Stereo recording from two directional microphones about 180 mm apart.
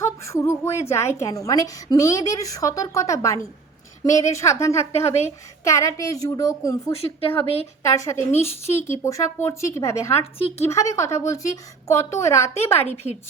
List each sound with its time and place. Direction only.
0.0 s a woman's voice: 15° left (ahead or behind)
6.9 s speech: 30° left (ahead or behind)
7.8 s a woman's voice: 15° left (ahead or behind)
10.3 s speech: 30° left (ahead or behind)
10.7 s a woman's voice: 15° left (ahead or behind)
12.9 s speech: 40° left (ahead or behind)